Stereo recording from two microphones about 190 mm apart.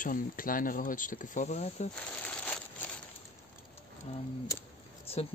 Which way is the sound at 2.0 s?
5° left (ahead or behind).